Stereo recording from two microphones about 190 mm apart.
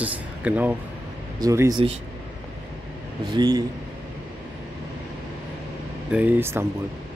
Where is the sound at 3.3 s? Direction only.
20° right (ahead or behind).